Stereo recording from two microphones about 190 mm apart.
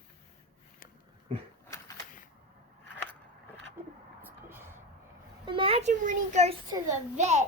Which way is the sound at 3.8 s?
10° right (ahead or behind).